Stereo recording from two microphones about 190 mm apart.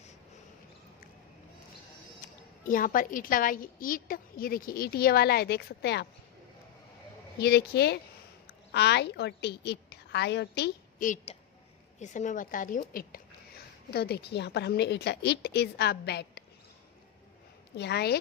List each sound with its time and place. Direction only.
2.2 s a woman's voice: 45° left (ahead or behind)
7.3 s a woman's voice: 60° left (ahead or behind)
11.0 s a woman's voice: 40° left (ahead or behind); by 16.4 s 60° left (ahead or behind)
17.7 s speech: 60° left (ahead or behind)